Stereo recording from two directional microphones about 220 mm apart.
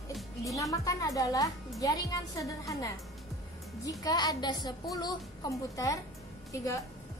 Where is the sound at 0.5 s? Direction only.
15° left (ahead or behind).